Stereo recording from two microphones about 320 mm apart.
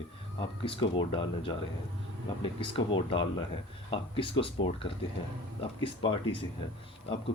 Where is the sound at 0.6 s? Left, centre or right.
Centre.